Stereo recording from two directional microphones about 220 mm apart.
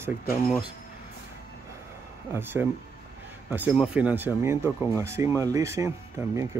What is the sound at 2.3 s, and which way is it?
Speech, 10° right (ahead or behind).